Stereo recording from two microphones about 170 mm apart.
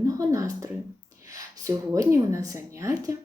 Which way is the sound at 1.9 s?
20° right (ahead or behind).